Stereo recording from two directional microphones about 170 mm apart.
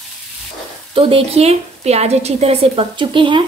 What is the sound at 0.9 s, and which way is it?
A woman's voice, 30° right (ahead or behind).